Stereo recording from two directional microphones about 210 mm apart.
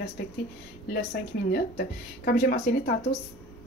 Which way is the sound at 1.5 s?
50° left (ahead or behind).